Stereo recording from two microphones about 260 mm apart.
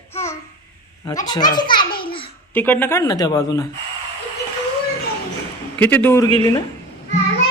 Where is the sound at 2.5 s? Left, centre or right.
Centre.